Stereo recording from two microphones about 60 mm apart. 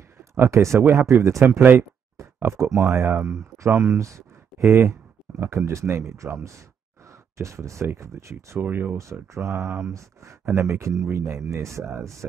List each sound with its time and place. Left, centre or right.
0.3 s speech: right
0.8 s speech: right
4.6 s speech: right
8.5 s speech: right
8.9 s speech: right